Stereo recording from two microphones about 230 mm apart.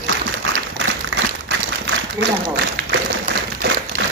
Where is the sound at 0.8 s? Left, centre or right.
Right.